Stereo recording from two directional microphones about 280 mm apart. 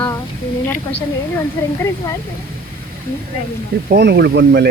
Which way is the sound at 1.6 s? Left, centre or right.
Centre.